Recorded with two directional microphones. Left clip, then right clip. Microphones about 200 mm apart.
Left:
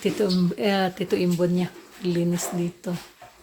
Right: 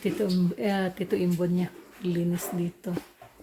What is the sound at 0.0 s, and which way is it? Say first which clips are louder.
Speech: left 4 dB; 10° left (ahead or behind).